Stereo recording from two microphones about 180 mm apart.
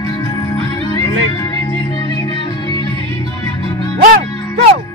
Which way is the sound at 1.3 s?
20° left (ahead or behind).